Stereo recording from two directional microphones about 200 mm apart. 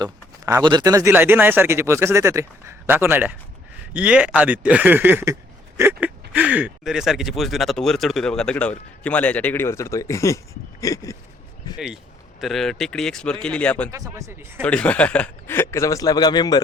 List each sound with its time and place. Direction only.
0.0 s speech: 20° right (ahead or behind); by 11.2 s 15° left (ahead or behind)
12.4 s speech: centre (ahead or behind)
13.9 s speech: 15° right (ahead or behind)
14.6 s a man's voice: 5° left (ahead or behind); by 16.6 s 20° left (ahead or behind)